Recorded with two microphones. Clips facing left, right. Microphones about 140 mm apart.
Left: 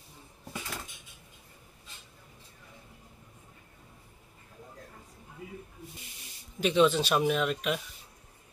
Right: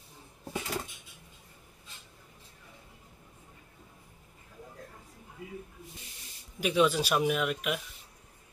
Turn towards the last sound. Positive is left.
turn(degrees=-5)  # may be behind; listen again after turning